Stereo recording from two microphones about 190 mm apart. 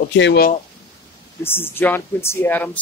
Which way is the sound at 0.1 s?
65° left (ahead or behind).